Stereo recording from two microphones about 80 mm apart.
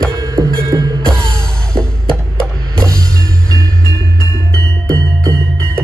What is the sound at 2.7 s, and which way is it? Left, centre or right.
Music, right.